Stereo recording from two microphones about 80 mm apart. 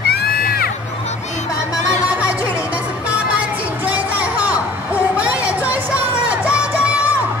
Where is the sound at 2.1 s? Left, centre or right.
Centre.